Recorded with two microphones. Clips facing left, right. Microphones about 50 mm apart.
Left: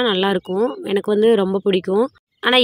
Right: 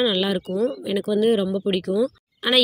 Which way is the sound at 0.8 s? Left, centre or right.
Left.